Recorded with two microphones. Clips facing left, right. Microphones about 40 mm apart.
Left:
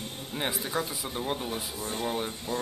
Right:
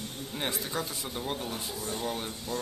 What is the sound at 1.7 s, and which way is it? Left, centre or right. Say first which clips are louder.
Speech: left 2 dB; left.